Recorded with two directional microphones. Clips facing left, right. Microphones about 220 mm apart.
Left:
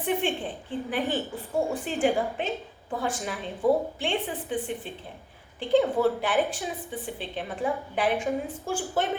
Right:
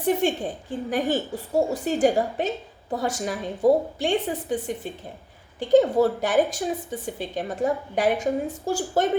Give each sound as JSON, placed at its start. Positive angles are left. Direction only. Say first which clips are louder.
{"t": 0.0, "sound": "a woman's voice", "louder": "right 5 dB", "side_deg": -40}